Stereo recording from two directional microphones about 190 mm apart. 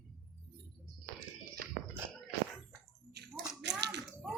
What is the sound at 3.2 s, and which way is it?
Biting, 60° right (ahead or behind).